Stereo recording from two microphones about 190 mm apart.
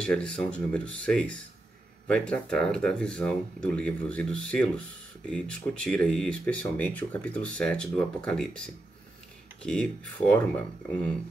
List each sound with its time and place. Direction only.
0.0 s speech: 5° left (ahead or behind)